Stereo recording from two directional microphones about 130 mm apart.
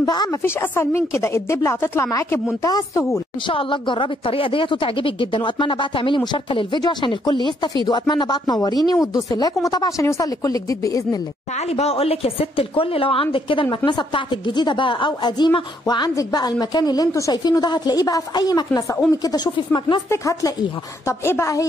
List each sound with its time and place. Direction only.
0.0 s speech: 30° left (ahead or behind)
0.4 s speech: 20° left (ahead or behind)
3.4 s a woman's voice: 40° left (ahead or behind)
11.5 s a woman's voice: 55° left (ahead or behind); by 20.0 s 35° left (ahead or behind)
20.1 s speech: 25° left (ahead or behind)